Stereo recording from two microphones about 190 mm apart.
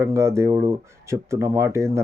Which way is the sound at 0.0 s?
15° right (ahead or behind).